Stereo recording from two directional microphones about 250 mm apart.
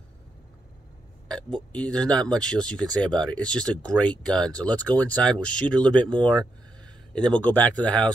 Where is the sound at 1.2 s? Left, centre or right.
Centre.